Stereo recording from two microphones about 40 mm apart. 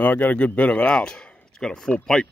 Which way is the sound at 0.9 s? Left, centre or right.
Left.